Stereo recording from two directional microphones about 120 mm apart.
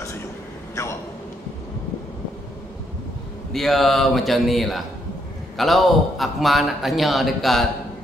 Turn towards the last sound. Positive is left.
turn(degrees=0)  # may be behind; listen again after turning